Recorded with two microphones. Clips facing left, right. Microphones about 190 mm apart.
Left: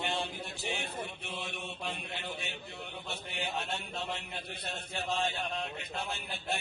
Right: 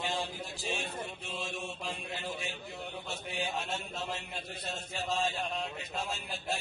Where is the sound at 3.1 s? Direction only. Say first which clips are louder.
Right 2 dB; 60° left (ahead or behind).